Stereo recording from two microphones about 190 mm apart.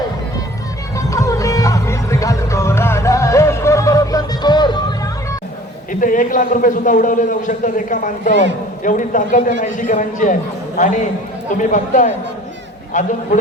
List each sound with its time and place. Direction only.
0.9 s music: 15° left (ahead or behind)
5.9 s a man's voice: 45° left (ahead or behind)